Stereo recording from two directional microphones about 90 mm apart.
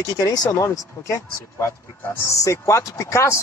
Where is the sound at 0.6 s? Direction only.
35° left (ahead or behind).